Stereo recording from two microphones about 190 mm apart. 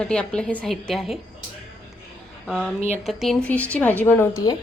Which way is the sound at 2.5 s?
5° left (ahead or behind).